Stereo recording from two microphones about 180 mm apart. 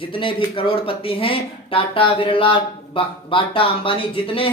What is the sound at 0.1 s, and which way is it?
A man's voice, 30° left (ahead or behind).